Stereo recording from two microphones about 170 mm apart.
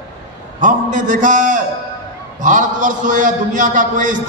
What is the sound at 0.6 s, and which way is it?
A man's voice, 50° right (ahead or behind).